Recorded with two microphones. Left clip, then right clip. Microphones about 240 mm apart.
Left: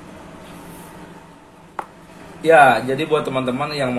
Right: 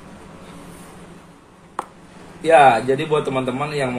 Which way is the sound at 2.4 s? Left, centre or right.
Left.